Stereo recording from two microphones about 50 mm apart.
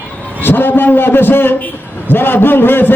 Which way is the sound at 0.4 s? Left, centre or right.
Left.